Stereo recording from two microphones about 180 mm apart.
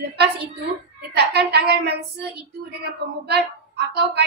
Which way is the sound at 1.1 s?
65° right (ahead or behind).